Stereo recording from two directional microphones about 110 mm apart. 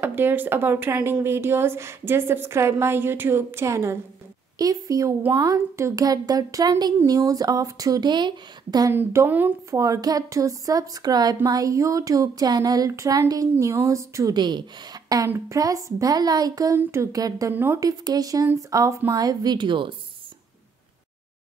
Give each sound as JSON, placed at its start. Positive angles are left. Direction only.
{"t": 0.0, "sound": "a woman's voice", "side_deg": -20}
{"t": 8.9, "sound": "speech", "side_deg": -20}
{"t": 9.7, "sound": "a woman's voice", "side_deg": -30}
{"t": 14.3, "sound": "speech", "side_deg": -40}
{"t": 15.2, "sound": "a woman's voice", "side_deg": -25}